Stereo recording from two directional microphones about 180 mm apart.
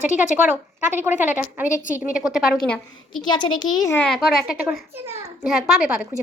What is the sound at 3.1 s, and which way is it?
Speech, 25° left (ahead or behind).